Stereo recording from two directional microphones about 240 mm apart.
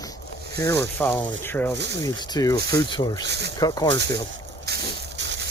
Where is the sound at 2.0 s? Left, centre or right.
Centre.